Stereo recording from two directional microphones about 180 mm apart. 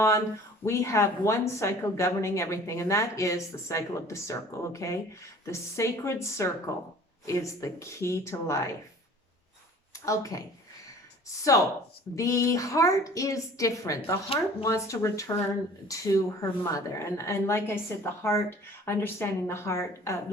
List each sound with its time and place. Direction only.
0.6 s speech: 15° left (ahead or behind)
9.9 s speech: 20° left (ahead or behind)